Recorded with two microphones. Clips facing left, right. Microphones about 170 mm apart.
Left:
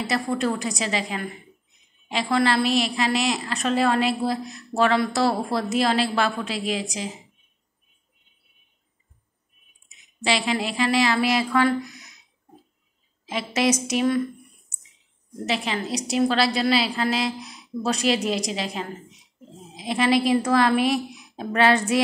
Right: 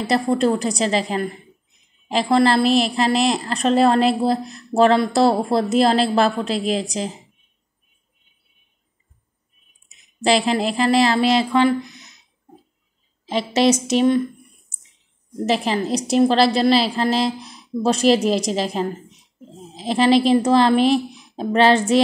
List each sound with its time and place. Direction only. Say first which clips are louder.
0.1 s a woman's voice: right 8 dB; 30° right (ahead or behind)
10.2 s a woman's voice: right 6 dB; 35° right (ahead or behind)
13.2 s a woman's voice: right 6 dB; 30° right (ahead or behind)
15.4 s a woman's voice: right 6 dB; 40° right (ahead or behind)